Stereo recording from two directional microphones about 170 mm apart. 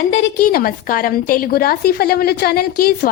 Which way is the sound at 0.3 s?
60° left (ahead or behind).